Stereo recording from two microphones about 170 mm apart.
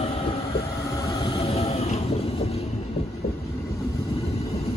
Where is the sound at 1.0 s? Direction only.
20° left (ahead or behind).